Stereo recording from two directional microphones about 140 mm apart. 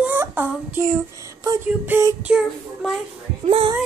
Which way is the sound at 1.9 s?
10° right (ahead or behind).